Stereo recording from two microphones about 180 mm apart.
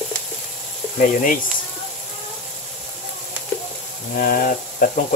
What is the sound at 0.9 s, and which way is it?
Speech, 50° left (ahead or behind).